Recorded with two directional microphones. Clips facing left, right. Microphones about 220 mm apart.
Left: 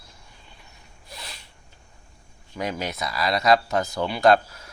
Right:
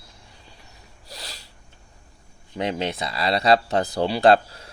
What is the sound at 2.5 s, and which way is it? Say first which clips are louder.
Speech: right 3 dB; 25° right (ahead or behind).